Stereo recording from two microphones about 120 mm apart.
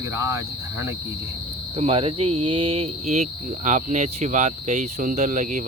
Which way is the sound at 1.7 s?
55° right (ahead or behind).